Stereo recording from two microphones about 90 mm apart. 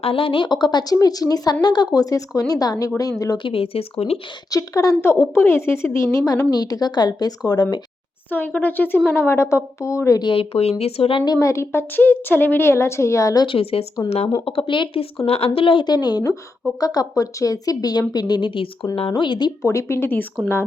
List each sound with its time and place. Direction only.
0.0 s speech: 85° left; by 0.9 s 55° left (ahead or behind)
0.9 s a woman's voice: 40° left (ahead or behind)
3.3 s speech: 80° left
4.5 s a woman's voice: 40° left (ahead or behind)
4.9 s a woman's voice: 25° left (ahead or behind)
6.5 s speech: 45° left (ahead or behind)
8.3 s a woman's voice: 20° left (ahead or behind); by 10.2 s 35° left (ahead or behind)
10.3 s speech: 90° left
11.3 s a woman's voice: 35° left (ahead or behind)
13.4 s speech: 80° left
13.9 s speech: 50° left (ahead or behind)
14.4 s speech: 75° left (ahead or behind)
15.4 s speech: 85° left; by 19.5 s 55° left (ahead or behind)
19.6 s a woman's voice: 35° left (ahead or behind)